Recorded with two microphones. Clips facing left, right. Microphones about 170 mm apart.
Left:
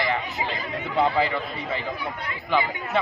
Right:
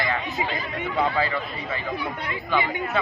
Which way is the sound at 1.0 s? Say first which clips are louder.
Left 2 dB; 20° left (ahead or behind).